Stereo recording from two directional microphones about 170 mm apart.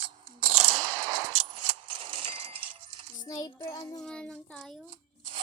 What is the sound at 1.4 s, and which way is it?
Keys jangling, 30° right (ahead or behind).